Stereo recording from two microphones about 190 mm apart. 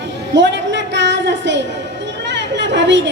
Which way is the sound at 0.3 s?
70° right (ahead or behind).